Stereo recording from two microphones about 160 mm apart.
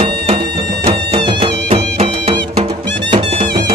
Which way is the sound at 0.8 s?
35° right (ahead or behind).